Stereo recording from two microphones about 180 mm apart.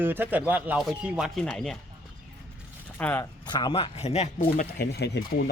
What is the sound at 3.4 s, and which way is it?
Speech, 25° left (ahead or behind).